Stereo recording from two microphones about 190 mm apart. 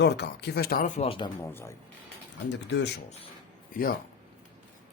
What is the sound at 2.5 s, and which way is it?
Speech, 70° left (ahead or behind).